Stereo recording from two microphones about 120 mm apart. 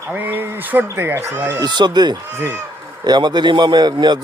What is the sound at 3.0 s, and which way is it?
A man's voice, 35° right (ahead or behind).